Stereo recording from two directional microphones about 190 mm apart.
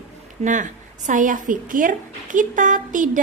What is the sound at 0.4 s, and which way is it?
A woman's voice, 40° right (ahead or behind).